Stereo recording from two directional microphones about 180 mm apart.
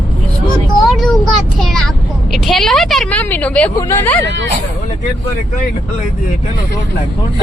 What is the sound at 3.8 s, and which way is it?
Speech, 15° left (ahead or behind).